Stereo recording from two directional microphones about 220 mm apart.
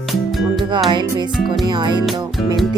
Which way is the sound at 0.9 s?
20° right (ahead or behind).